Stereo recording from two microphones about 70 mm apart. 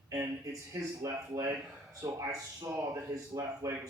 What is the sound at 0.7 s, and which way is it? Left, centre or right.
Speech, right.